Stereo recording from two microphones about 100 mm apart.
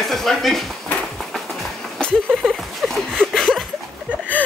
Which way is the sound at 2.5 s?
Centre (ahead or behind).